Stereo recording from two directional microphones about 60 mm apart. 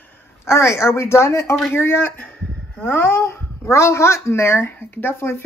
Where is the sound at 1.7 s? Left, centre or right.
Left.